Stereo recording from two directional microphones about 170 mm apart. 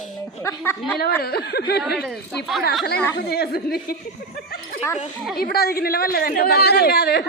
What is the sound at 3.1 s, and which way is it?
Speech, 65° left (ahead or behind).